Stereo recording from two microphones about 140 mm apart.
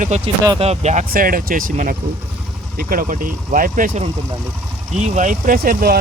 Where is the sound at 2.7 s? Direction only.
90° right; by 4.0 s 70° right (ahead or behind).